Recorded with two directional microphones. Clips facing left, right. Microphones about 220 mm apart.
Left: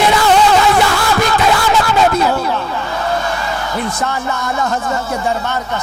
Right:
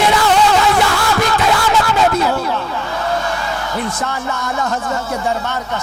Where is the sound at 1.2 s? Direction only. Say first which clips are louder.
Left 2 dB; 15° left (ahead or behind).